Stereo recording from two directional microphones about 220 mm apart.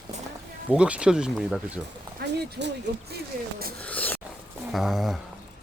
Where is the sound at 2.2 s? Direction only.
50° right (ahead or behind).